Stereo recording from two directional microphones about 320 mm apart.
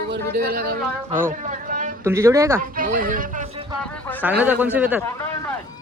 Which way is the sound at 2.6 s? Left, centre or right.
Right.